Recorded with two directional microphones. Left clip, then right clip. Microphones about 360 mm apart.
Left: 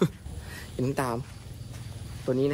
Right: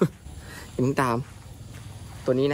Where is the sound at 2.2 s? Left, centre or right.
Centre.